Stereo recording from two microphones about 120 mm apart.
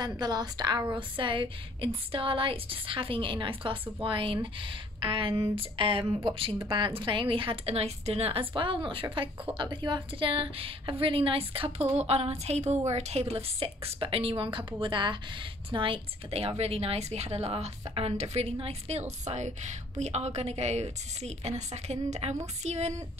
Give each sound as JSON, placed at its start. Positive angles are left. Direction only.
{"t": 0.2, "sound": "a woman's voice", "side_deg": -35}